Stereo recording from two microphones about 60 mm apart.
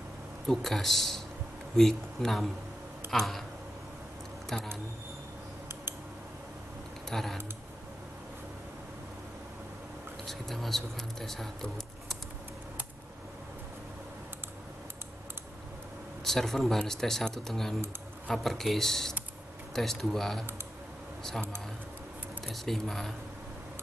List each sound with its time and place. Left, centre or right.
0.5 s speech: centre
4.5 s speech: centre
7.1 s speech: centre
10.2 s speech: centre
16.3 s speech: centre
22.5 s speech: centre